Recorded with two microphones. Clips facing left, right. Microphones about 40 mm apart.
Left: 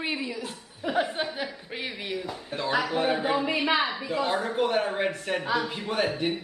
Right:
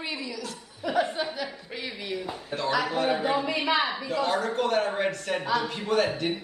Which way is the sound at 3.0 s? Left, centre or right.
Centre.